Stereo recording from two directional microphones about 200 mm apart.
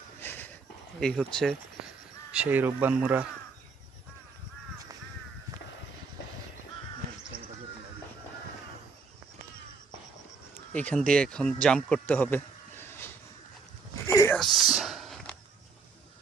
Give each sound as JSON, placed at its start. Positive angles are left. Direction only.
{"t": 0.2, "sound": "a sound", "side_deg": 10}
{"t": 0.9, "sound": "speech", "side_deg": 5}
{"t": 2.3, "sound": "speech", "side_deg": -10}
{"t": 7.3, "sound": "basketball bounce", "side_deg": -45}
{"t": 10.8, "sound": "speech", "side_deg": 5}
{"t": 14.1, "sound": "a sound", "side_deg": 15}
{"t": 14.3, "sound": "whispering", "side_deg": 0}